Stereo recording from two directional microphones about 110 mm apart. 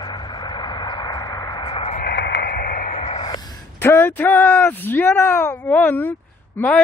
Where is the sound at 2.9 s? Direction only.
65° left (ahead or behind).